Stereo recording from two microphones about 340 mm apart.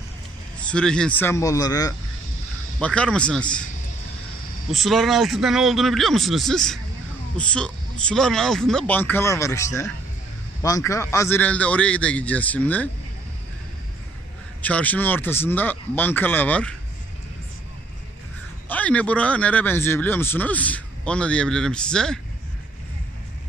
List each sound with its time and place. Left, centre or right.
0.6 s speech: centre
4.7 s speech: centre
14.6 s speech: centre
18.7 s speech: centre